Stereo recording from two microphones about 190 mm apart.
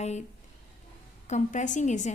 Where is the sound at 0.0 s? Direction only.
35° left (ahead or behind).